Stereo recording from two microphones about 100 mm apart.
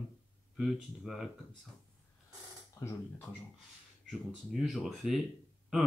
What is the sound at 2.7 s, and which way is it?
Speech, 35° left (ahead or behind).